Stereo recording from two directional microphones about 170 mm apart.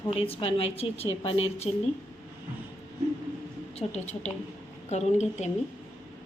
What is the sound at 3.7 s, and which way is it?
A woman's voice, 40° left (ahead or behind).